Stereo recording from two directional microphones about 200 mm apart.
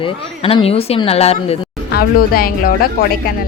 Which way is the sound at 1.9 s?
50° left (ahead or behind).